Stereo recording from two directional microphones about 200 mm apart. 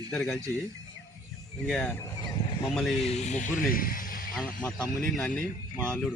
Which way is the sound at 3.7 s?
45° left (ahead or behind).